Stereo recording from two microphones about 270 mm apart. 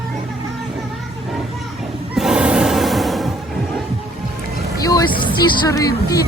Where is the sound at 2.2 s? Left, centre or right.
Centre.